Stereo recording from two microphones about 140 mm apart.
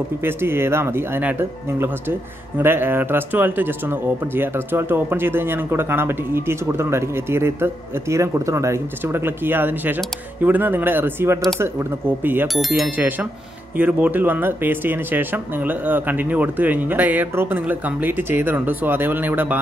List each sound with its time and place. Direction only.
0.2 s speech: 15° right (ahead or behind)
2.6 s speech: 15° right (ahead or behind)
12.5 s speech: centre (ahead or behind)
12.9 s speech: 10° right (ahead or behind)